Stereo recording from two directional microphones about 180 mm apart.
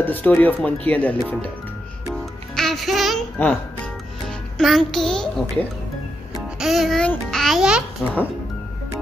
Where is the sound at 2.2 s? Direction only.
Centre (ahead or behind).